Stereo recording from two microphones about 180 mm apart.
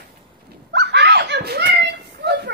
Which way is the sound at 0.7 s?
70° right (ahead or behind).